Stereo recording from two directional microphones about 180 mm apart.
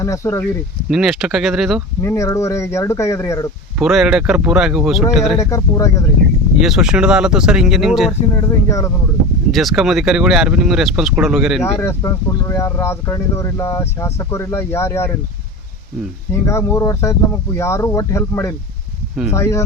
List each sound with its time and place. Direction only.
0.0 s speech: 15° left (ahead or behind)
0.9 s speech: 5° right (ahead or behind)
2.0 s speech: 15° left (ahead or behind)
3.8 s speech: centre (ahead or behind)
5.4 s speech: 15° left (ahead or behind)
6.6 s speech: centre (ahead or behind)
8.4 s speech: 20° left (ahead or behind)
9.5 s speech: centre (ahead or behind)
11.6 s speech: 15° left (ahead or behind)
16.3 s speech: 15° left (ahead or behind)